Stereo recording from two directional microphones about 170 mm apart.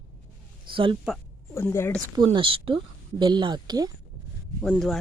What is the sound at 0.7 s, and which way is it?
Speech, 30° right (ahead or behind).